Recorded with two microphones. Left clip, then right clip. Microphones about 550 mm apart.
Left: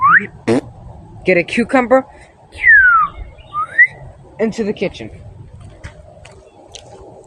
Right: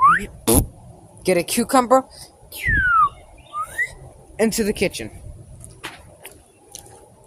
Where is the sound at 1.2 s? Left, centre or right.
Right.